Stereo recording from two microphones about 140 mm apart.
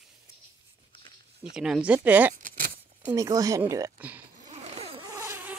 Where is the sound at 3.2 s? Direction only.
25° right (ahead or behind).